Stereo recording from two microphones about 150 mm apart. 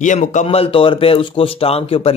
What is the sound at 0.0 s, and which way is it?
Speech, 55° left (ahead or behind).